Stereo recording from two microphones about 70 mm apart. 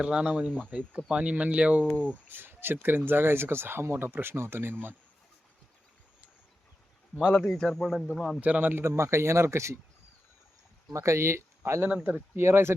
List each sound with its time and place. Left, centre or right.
0.0 s speech: centre
2.3 s speech: right
7.4 s a man's voice: centre
8.4 s speech: right
8.8 s speech: right
10.9 s speech: right
11.9 s speech: centre
12.4 s speech: right